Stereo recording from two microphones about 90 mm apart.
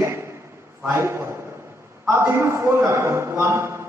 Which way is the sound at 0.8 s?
30° right (ahead or behind).